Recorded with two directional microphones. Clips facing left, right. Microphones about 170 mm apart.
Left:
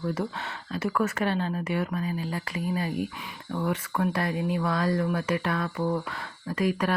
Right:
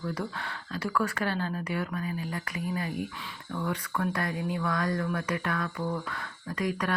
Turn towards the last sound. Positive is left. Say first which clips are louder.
# left 4 dB
turn(degrees=25)  # may be behind; listen again after turning